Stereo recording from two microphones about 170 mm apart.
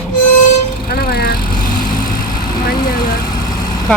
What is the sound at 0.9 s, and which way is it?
Vehicle, 65° left (ahead or behind).